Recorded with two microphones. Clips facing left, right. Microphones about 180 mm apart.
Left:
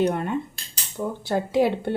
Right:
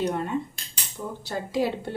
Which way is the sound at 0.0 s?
60° left (ahead or behind).